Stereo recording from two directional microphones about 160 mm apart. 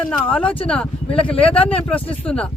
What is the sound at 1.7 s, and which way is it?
Speech, 5° left (ahead or behind).